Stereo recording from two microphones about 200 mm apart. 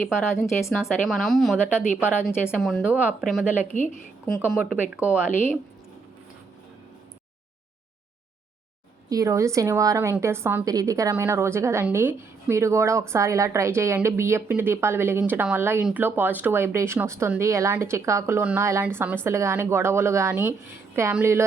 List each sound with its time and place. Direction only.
0.0 s speech: 15° left (ahead or behind)
0.7 s speech: centre (ahead or behind)
3.7 s a woman's voice: 40° left (ahead or behind)
4.6 s a woman's voice: 5° right (ahead or behind)
9.0 s a woman's voice: 15° right (ahead or behind)